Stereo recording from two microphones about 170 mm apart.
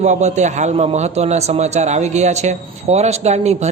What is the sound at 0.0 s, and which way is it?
A man's voice, 40° right (ahead or behind).